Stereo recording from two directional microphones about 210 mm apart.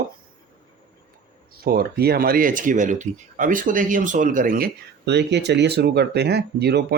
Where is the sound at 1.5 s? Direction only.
45° right (ahead or behind).